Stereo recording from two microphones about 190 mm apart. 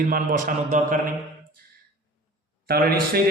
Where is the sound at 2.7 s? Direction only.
55° right (ahead or behind).